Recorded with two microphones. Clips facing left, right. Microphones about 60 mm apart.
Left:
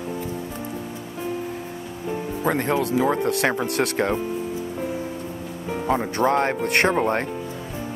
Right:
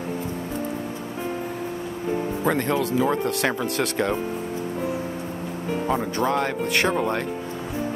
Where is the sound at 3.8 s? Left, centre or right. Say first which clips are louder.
Left 3 dB; centre.